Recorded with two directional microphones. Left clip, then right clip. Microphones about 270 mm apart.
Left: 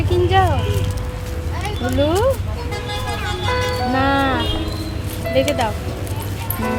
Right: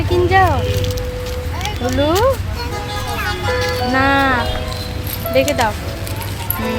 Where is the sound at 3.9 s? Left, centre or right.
Centre.